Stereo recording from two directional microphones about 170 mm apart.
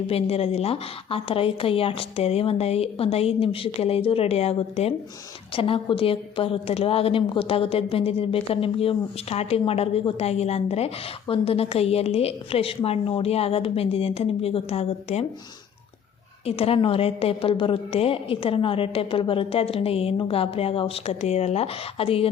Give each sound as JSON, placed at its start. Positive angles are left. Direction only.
{"t": 0.1, "sound": "a woman's voice", "side_deg": 35}
{"t": 16.5, "sound": "a woman's voice", "side_deg": 35}